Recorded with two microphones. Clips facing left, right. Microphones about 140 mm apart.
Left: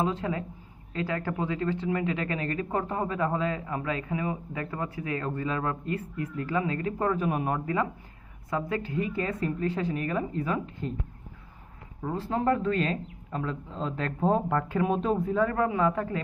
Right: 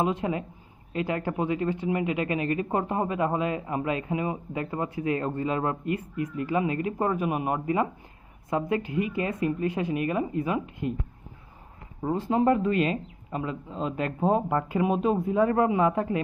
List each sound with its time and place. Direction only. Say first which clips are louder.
0.0 s speech: right 2 dB; 15° right (ahead or behind)
12.0 s speech: right 4 dB; 15° right (ahead or behind)